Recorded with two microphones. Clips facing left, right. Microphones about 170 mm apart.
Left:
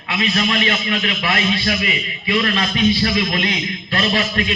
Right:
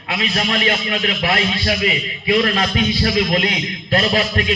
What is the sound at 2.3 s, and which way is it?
A man's voice, 45° right (ahead or behind).